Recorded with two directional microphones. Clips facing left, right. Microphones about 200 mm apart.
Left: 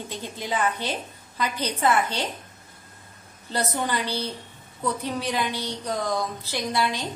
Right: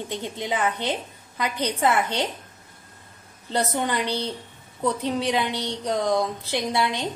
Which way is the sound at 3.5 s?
20° right (ahead or behind).